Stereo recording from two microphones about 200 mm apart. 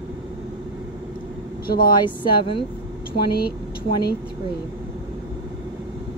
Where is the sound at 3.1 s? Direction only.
50° left (ahead or behind).